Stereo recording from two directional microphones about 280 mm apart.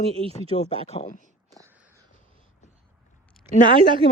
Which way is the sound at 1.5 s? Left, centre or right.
Centre.